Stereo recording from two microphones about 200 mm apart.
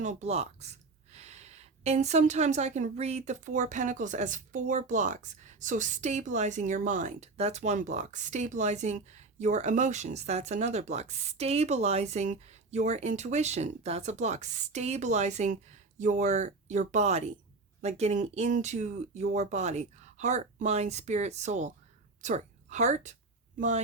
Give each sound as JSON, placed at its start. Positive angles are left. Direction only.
{"t": 0.0, "sound": "a woman's voice", "side_deg": -35}